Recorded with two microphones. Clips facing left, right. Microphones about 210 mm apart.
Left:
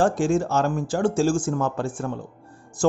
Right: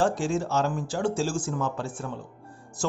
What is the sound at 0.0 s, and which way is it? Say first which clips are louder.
Speech: left 5 dB; 50° left (ahead or behind).